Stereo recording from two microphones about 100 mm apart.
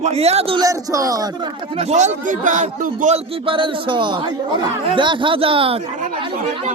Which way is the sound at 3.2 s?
70° right (ahead or behind).